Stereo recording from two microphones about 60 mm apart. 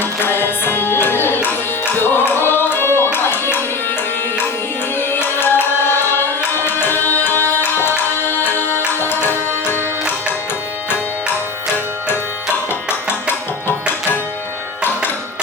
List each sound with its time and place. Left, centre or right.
0.0 s music: left
4.9 s tabla: left
8.8 s music: left